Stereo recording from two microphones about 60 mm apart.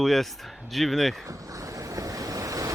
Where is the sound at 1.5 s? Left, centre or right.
Right.